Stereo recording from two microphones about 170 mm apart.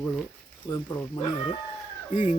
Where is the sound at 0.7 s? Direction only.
15° left (ahead or behind).